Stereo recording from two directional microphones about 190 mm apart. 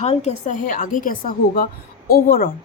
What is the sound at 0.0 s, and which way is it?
A woman's voice, 35° left (ahead or behind).